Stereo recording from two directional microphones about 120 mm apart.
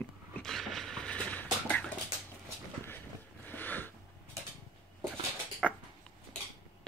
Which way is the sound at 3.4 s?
15° left (ahead or behind).